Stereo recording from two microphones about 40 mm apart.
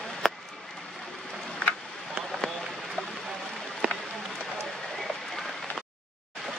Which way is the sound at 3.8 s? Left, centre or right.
Right.